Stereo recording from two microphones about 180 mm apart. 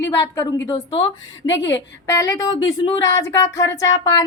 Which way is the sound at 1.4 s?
90° left.